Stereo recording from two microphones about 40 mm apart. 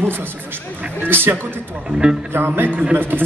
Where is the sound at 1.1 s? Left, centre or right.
Right.